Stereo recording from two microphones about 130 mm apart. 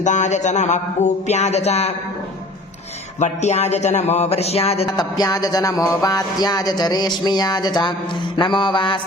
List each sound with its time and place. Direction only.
0.0 s music: 65° left (ahead or behind)
3.2 s music: 60° left (ahead or behind)
4.9 s music: 30° left (ahead or behind)